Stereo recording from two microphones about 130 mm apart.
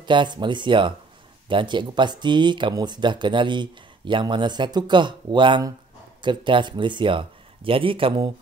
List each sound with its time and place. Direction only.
0.0 s speech: 35° right (ahead or behind)